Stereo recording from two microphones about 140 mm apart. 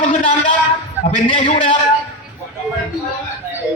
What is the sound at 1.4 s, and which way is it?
Speech, 45° left (ahead or behind).